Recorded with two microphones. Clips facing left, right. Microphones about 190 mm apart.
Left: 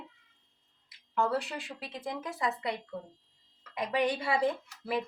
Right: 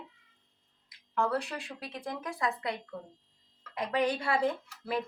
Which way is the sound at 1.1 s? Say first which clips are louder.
Even; centre (ahead or behind).